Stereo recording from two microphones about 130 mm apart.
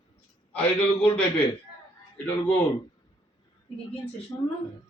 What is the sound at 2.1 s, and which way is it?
Speech, 10° left (ahead or behind).